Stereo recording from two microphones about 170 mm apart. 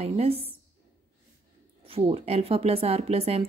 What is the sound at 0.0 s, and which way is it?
Speech, 35° right (ahead or behind).